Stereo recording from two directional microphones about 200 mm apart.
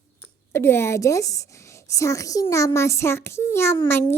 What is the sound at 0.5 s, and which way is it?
A woman's voice, 10° left (ahead or behind).